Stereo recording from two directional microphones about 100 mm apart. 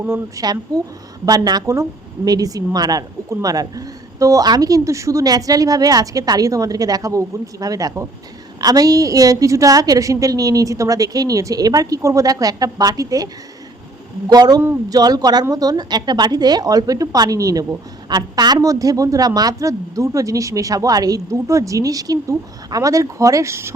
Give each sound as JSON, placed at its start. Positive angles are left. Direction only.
{"t": 0.3, "sound": "a woman's voice", "side_deg": -40}